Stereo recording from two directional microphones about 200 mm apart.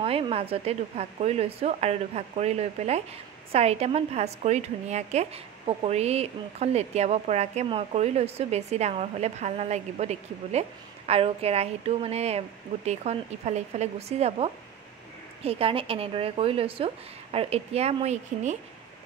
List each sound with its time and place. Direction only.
0.0 s a woman's voice: 30° right (ahead or behind)